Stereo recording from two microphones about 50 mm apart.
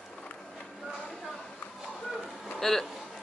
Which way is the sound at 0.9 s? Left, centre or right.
Centre.